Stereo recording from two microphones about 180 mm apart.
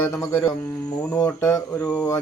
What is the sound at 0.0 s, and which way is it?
Speech, 15° left (ahead or behind).